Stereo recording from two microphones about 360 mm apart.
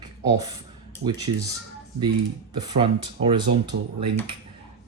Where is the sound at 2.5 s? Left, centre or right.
Centre.